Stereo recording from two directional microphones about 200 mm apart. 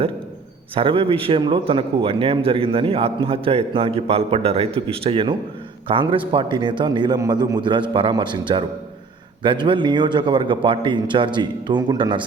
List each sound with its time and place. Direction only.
0.8 s a man's voice: 25° right (ahead or behind)